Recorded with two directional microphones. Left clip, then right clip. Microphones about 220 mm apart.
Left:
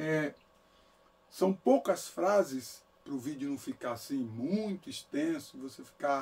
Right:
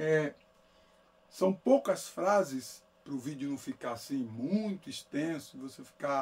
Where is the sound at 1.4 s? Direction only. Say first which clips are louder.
Even; 15° right (ahead or behind).